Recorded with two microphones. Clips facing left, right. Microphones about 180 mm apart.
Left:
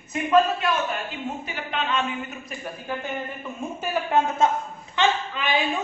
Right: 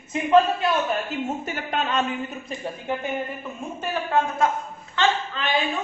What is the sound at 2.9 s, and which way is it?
Speech, 20° right (ahead or behind).